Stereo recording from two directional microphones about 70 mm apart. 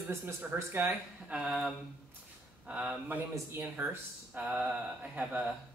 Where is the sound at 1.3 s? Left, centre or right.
Right.